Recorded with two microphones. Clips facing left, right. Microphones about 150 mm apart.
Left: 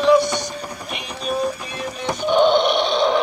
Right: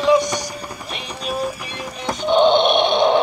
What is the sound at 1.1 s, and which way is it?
Music, centre (ahead or behind).